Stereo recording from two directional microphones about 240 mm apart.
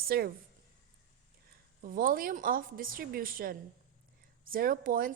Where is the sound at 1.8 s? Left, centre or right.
Right.